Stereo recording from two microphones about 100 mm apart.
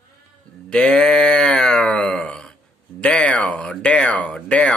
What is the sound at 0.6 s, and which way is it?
Speech, 10° left (ahead or behind).